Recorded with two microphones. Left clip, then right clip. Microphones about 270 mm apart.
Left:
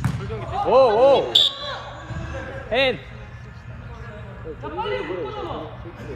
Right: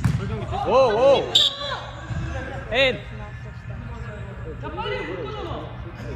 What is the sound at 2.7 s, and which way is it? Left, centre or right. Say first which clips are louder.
Speech: even; left.